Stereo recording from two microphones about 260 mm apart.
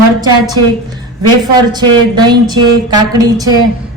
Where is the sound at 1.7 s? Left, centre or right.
Centre.